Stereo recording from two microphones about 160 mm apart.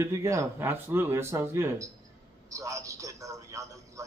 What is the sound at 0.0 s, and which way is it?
A man's voice, 20° right (ahead or behind).